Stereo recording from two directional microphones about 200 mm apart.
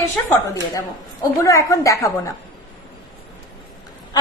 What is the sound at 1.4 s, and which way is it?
Speech, 15° left (ahead or behind).